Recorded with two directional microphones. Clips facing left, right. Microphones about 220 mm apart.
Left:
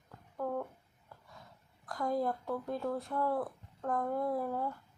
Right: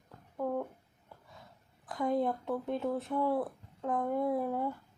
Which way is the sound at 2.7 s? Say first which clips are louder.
Right 3 dB; 25° right (ahead or behind).